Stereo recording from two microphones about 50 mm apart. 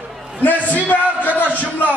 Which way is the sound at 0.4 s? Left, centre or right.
Left.